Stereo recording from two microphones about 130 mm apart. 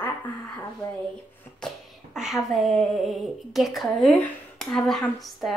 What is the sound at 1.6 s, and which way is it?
Speech, 5° right (ahead or behind).